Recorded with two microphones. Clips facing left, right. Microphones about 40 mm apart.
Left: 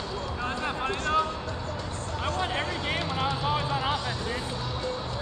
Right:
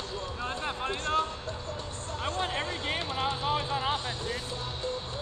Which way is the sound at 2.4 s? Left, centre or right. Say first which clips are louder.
Left 3 dB; left.